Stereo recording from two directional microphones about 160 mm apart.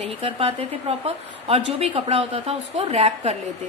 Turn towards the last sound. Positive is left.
turn(degrees=-40)  # may be behind; listen again after turning